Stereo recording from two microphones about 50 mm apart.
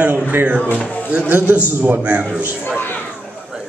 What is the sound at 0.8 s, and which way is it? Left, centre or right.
Speech, left.